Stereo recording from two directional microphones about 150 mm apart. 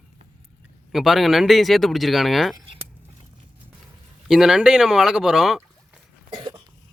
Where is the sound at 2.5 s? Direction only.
35° right (ahead or behind).